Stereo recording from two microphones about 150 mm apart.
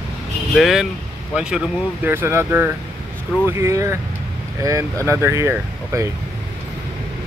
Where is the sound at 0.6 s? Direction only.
Centre (ahead or behind).